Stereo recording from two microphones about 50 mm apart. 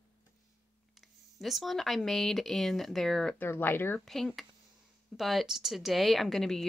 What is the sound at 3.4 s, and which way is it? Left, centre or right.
Speech, left.